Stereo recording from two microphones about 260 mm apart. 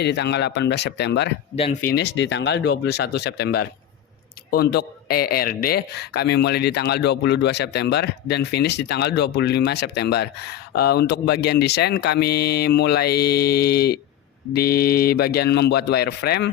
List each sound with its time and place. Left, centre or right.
0.0 s speech: left
1.5 s speech: left
1.9 s speech: left